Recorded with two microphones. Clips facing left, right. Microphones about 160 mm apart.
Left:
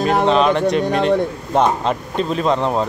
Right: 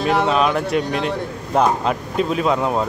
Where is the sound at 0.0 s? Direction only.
45° left (ahead or behind).